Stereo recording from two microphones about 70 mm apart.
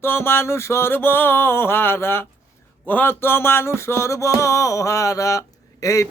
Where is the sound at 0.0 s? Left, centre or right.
Left.